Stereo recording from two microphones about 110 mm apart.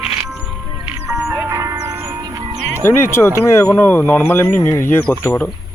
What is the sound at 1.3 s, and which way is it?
Music, 25° right (ahead or behind).